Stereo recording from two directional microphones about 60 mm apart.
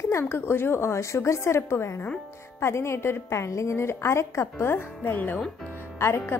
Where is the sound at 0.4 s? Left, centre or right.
Left.